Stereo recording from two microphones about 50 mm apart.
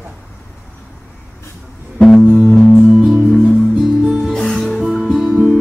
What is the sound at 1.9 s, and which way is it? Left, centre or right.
Music, centre.